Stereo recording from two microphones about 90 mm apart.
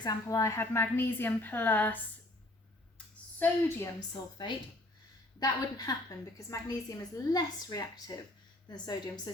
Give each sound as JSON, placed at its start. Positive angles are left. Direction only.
{"t": 0.0, "sound": "a woman's voice", "side_deg": 40}
{"t": 3.3, "sound": "a woman's voice", "side_deg": 25}
{"t": 5.4, "sound": "a woman's voice", "side_deg": 45}